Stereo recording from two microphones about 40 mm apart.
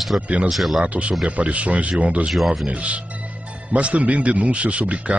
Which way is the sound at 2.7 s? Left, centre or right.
Right.